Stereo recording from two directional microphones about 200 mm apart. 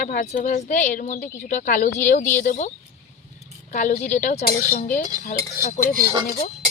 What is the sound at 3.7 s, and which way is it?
Speech, 35° left (ahead or behind).